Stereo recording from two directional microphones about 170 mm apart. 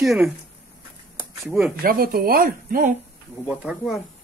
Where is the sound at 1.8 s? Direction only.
60° right (ahead or behind).